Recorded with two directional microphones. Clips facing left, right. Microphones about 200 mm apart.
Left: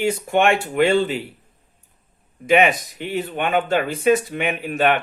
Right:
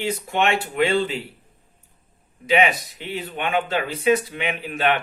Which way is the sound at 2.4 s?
50° left (ahead or behind).